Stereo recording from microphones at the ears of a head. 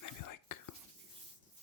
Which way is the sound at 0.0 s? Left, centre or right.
Left.